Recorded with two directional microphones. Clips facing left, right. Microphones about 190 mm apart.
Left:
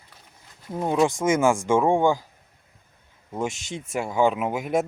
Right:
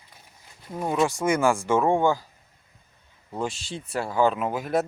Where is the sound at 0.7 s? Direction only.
20° left (ahead or behind).